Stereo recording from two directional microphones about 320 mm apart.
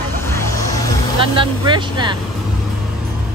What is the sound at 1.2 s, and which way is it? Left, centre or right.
Speech, centre.